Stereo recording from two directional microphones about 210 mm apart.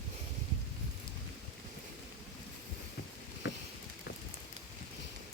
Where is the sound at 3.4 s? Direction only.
60° left (ahead or behind).